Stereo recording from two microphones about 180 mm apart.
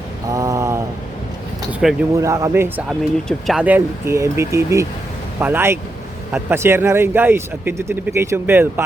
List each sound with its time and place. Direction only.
0.3 s mantra: 20° right (ahead or behind)
1.8 s speech: centre (ahead or behind)
2.2 s speech: 15° right (ahead or behind)
3.0 s speech: centre (ahead or behind)